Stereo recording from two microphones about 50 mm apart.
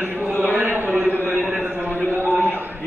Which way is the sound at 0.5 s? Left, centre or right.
Right.